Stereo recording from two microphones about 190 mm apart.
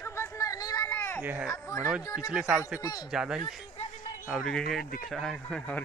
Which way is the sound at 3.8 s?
40° left (ahead or behind).